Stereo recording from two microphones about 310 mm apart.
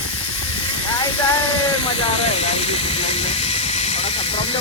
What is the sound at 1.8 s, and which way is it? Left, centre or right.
Hiss, centre.